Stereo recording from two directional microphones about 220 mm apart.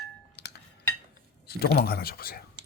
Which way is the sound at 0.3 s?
50° left (ahead or behind).